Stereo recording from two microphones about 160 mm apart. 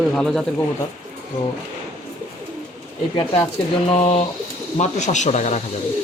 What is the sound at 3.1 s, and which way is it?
Speech, 30° left (ahead or behind).